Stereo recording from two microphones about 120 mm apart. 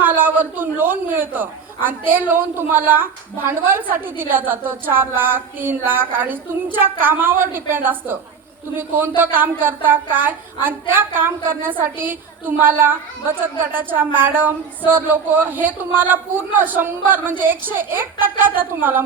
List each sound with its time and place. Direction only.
0.0 s a man's voice: 15° right (ahead or behind)